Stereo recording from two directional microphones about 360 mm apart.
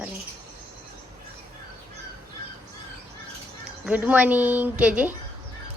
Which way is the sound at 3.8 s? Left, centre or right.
Centre.